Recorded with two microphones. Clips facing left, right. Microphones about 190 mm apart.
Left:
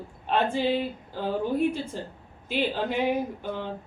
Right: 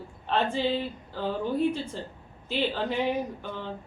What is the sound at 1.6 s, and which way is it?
Speech, 10° left (ahead or behind).